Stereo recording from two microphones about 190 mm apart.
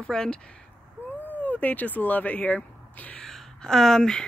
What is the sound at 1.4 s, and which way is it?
Speech, 10° left (ahead or behind).